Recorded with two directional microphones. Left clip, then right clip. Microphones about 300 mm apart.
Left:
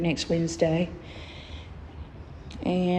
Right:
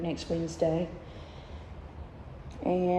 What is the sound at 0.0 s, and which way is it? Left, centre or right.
Speech, centre.